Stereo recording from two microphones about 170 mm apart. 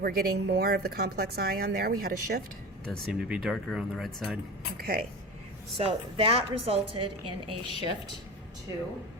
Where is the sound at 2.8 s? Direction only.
5° right (ahead or behind).